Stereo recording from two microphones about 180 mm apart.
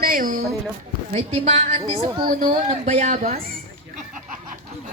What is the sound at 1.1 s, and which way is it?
Speech, 35° right (ahead or behind).